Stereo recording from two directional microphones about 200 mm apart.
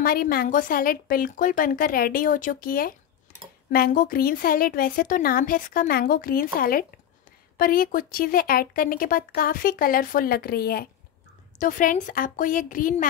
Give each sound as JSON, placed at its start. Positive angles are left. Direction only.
{"t": 0.0, "sound": "a woman's voice", "side_deg": 50}